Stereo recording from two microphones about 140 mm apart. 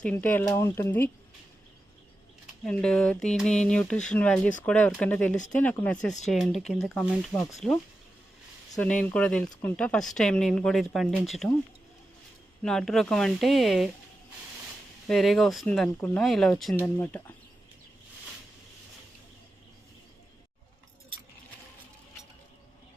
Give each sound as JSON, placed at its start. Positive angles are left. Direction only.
{"t": 0.0, "sound": "speech", "side_deg": 10}
{"t": 2.6, "sound": "speech", "side_deg": 5}
{"t": 12.6, "sound": "speech", "side_deg": 5}
{"t": 15.0, "sound": "speech", "side_deg": 0}
{"t": 16.7, "sound": "speech", "side_deg": 15}